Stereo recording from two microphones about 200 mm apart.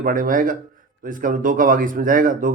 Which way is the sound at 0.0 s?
45° right (ahead or behind).